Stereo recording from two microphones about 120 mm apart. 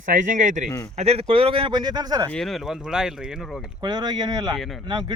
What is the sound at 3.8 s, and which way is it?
Speech, 35° right (ahead or behind).